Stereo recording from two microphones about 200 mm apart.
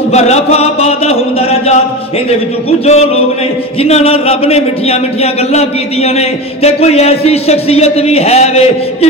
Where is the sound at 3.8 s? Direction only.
30° left (ahead or behind).